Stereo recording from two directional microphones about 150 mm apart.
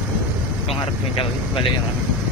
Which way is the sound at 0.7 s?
35° left (ahead or behind).